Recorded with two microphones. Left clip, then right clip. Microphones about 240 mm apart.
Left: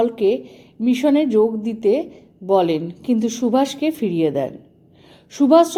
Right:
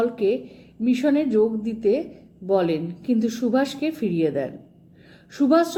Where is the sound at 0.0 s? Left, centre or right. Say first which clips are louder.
Left 4 dB; left.